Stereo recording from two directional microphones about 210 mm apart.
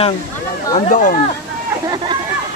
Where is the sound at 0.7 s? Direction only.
35° left (ahead or behind).